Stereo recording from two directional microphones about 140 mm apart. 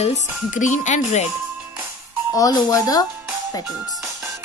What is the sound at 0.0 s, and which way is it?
Speech, 60° left (ahead or behind).